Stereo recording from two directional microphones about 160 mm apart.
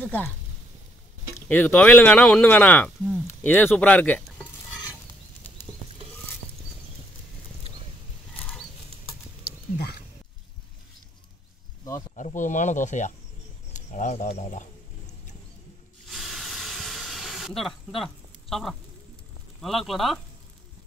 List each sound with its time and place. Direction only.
0.0 s speech: 10° left (ahead or behind)
1.5 s speech: 10° left (ahead or behind)
12.2 s speech: 50° left (ahead or behind)
16.1 s hiss: centre (ahead or behind)
19.6 s speech: centre (ahead or behind)